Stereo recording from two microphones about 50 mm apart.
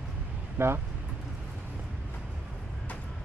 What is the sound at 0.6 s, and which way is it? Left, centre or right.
Speech, right.